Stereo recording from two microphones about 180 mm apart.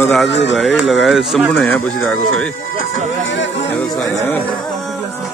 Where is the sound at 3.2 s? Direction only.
90° left.